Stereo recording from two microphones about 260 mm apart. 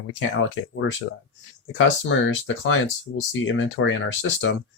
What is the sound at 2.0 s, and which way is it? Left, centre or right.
Speech, left.